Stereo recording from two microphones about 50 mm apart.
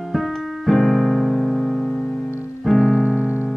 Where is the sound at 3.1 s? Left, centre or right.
Right.